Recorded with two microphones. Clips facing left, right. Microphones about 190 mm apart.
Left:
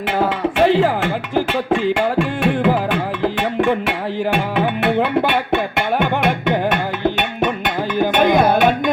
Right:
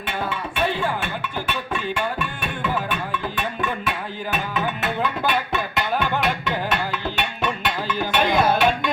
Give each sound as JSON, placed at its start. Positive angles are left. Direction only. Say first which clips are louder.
{"t": 0.2, "sound": "music", "louder": "left 9 dB", "side_deg": 90}